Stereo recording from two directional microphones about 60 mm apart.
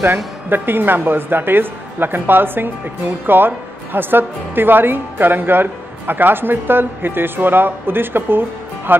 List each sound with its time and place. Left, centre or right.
0.0 s a woman's voice: right